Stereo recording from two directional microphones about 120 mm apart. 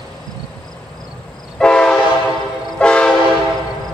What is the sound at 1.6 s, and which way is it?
Train, 5° left (ahead or behind).